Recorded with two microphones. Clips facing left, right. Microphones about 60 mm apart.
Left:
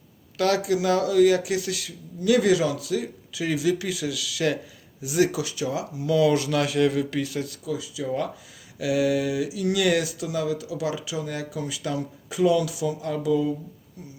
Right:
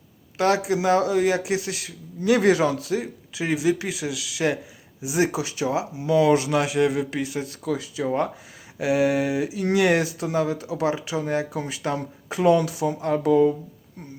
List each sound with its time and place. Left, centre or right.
0.3 s a man's voice: right
7.6 s speech: right
8.8 s speech: right